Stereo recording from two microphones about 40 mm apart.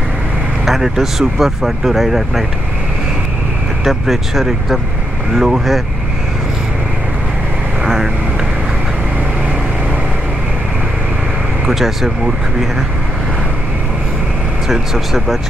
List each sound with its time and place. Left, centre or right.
0.7 s speech: centre
3.8 s speech: centre
7.8 s vehicle: centre
11.6 s speech: centre
14.7 s speech: centre